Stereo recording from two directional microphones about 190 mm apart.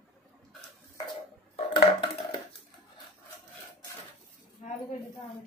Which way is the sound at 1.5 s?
25° left (ahead or behind).